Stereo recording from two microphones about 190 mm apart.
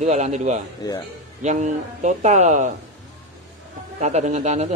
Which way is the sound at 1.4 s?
40° right (ahead or behind).